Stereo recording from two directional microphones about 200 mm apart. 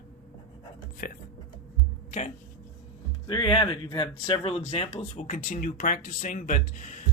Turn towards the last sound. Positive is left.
turn(degrees=40)  # may be behind; listen again after turning